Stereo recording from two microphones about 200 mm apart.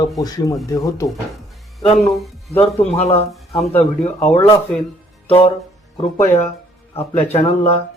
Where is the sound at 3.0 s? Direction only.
30° left (ahead or behind).